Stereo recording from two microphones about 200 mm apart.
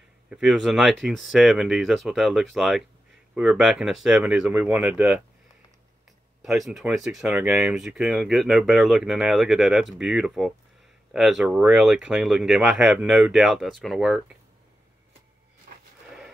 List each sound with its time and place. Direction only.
0.3 s speech: centre (ahead or behind)
6.4 s speech: centre (ahead or behind)
15.7 s a sound: 45° right (ahead or behind)